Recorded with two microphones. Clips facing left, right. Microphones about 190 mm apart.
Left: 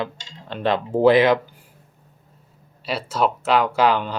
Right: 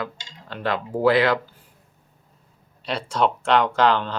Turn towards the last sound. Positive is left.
turn(degrees=10)  # may be behind; listen again after turning